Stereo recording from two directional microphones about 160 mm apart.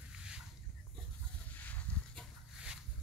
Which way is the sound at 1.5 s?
10° left (ahead or behind).